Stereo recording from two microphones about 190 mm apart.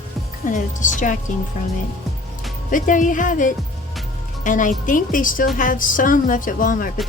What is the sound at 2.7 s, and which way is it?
A woman's voice, 45° left (ahead or behind).